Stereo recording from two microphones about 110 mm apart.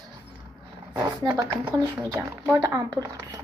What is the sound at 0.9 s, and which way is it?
Speech, 35° right (ahead or behind).